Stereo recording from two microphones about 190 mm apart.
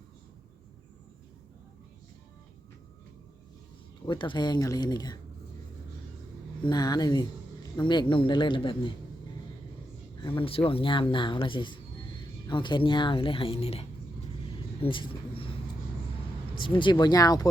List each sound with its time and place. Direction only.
4.0 s speech: 25° left (ahead or behind)
6.6 s speech: 20° left (ahead or behind)
10.2 s speech: 25° left (ahead or behind)
14.8 s vehicle: 25° left (ahead or behind)
16.6 s speech: 25° left (ahead or behind)